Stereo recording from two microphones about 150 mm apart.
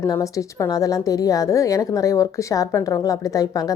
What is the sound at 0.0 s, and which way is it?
A woman's voice, 20° left (ahead or behind).